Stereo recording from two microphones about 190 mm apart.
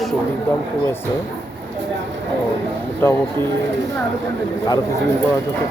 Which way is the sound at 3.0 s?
15° left (ahead or behind).